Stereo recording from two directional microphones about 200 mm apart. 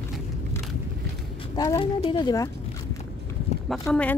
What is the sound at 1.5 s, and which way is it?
Speech, 20° left (ahead or behind).